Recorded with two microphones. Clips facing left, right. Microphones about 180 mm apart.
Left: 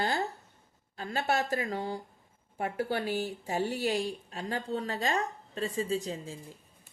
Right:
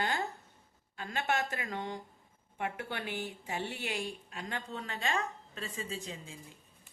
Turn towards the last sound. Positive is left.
turn(degrees=35)  # may be behind; listen again after turning